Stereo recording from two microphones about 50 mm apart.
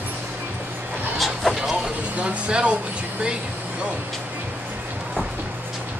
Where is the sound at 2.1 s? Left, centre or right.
Right.